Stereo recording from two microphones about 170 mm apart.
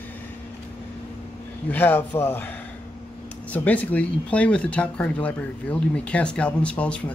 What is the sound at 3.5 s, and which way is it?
Speech, 10° left (ahead or behind).